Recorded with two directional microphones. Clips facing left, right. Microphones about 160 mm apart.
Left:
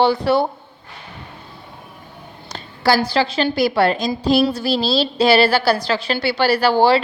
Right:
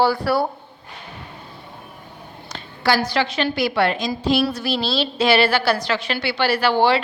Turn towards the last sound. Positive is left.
turn(degrees=35)  # may be behind; listen again after turning